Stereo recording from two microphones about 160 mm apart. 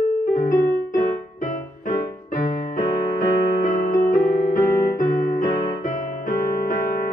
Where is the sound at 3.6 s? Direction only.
60° left (ahead or behind).